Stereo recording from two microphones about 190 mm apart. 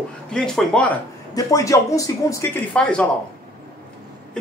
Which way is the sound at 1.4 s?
15° left (ahead or behind).